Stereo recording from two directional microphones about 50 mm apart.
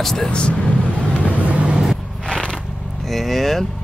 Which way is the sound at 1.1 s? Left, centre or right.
Left.